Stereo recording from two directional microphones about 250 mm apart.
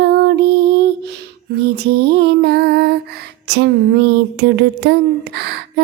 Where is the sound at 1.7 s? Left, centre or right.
Right.